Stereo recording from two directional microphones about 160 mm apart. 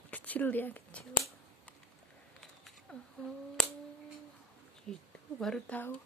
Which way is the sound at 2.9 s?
5° left (ahead or behind).